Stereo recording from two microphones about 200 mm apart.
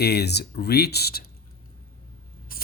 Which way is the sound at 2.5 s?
45° left (ahead or behind).